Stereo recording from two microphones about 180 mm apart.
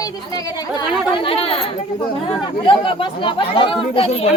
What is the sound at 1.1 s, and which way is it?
Speech, 30° left (ahead or behind).